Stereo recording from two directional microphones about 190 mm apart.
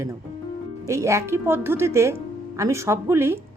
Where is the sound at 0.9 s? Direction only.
15° right (ahead or behind).